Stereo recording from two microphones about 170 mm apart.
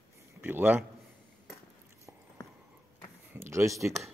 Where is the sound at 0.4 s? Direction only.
10° right (ahead or behind).